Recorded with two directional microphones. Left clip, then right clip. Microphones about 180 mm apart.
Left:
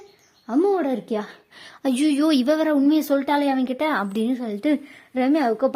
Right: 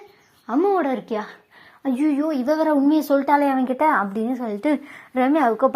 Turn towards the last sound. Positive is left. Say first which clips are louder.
# right 2 dB
turn(degrees=25)  # may be behind; listen again after turning